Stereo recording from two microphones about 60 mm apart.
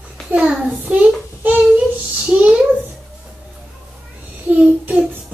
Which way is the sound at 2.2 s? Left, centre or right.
Centre.